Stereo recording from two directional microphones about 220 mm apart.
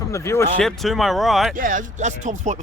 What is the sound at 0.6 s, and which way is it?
Speech, centre (ahead or behind).